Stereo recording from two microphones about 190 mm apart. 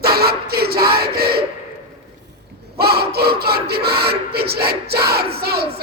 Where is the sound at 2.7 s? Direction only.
55° right (ahead or behind).